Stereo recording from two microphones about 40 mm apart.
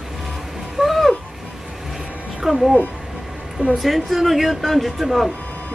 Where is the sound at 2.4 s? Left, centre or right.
Centre.